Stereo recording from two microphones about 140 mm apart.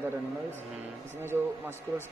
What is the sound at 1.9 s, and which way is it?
Speech, 25° right (ahead or behind).